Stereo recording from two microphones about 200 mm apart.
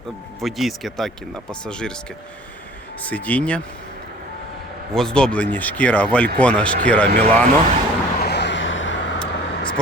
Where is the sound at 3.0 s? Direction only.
5° left (ahead or behind).